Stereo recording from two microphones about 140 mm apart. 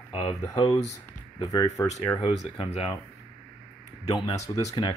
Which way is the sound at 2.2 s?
40° left (ahead or behind).